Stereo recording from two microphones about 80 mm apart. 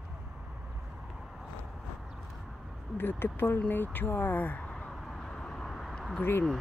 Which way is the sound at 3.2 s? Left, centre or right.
Left.